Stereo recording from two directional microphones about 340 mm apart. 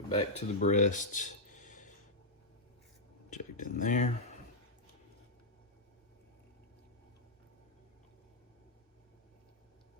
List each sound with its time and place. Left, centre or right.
0.1 s speech: centre
3.2 s speech: left